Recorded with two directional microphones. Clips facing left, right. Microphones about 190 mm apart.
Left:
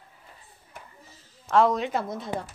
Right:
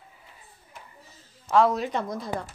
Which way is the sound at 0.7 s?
55° left (ahead or behind).